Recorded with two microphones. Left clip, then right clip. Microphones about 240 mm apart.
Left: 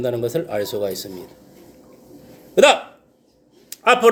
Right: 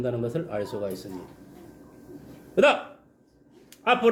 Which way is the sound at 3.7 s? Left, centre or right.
Left.